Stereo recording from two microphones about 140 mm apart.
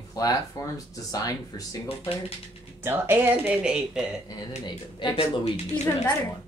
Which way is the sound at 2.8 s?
20° right (ahead or behind).